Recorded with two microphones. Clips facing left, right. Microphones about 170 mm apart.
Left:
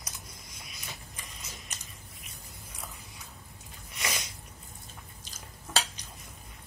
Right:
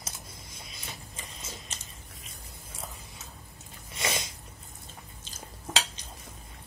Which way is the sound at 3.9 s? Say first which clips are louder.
Right 4 dB; 25° right (ahead or behind).